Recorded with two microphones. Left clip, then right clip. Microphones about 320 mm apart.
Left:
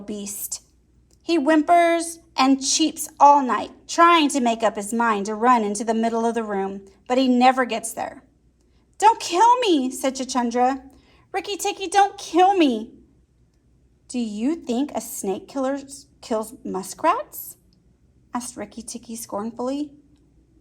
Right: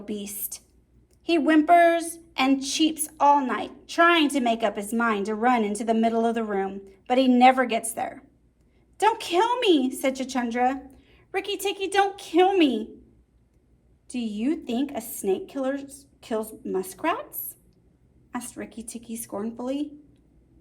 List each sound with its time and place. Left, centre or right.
0.0 s a woman's voice: centre
14.1 s a woman's voice: centre